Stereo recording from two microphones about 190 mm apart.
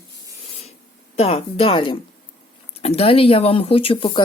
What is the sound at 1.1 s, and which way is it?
Speech, 30° left (ahead or behind).